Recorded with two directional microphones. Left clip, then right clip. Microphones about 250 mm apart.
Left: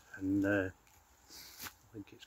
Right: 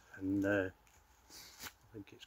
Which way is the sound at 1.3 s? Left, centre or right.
Centre.